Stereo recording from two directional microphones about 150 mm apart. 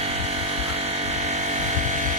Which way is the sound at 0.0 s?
45° right (ahead or behind).